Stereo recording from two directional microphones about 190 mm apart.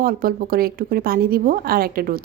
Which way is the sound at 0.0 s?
50° right (ahead or behind).